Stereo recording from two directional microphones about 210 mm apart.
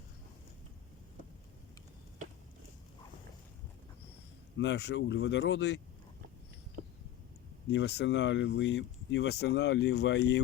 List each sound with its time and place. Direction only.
4.5 s speech: 55° left (ahead or behind)
6.8 s a sound: 45° right (ahead or behind)
7.7 s speech: 55° left (ahead or behind)